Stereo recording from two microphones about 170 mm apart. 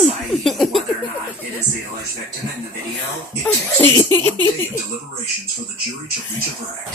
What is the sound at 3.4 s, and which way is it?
Laughter, 10° left (ahead or behind).